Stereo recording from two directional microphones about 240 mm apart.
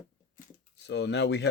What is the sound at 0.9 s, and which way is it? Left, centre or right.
Speech, left.